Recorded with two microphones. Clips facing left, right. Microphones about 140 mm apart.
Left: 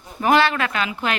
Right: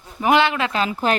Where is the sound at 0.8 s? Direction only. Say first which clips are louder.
Right 4 dB; 35° right (ahead or behind).